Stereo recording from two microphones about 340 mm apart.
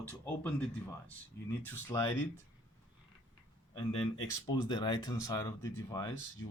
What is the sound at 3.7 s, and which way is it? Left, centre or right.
Speech, centre.